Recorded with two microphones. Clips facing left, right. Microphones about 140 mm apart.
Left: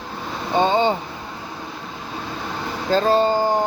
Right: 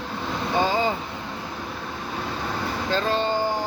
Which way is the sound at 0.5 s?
25° left (ahead or behind).